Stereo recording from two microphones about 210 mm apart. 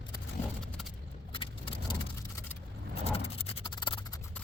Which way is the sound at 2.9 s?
30° left (ahead or behind).